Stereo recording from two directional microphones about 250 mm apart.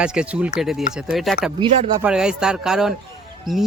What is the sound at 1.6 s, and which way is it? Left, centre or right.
Speech, centre.